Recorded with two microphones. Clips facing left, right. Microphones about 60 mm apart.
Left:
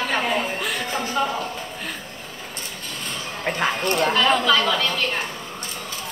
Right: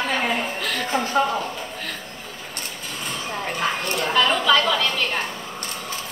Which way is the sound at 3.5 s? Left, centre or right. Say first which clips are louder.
Left 4 dB; left.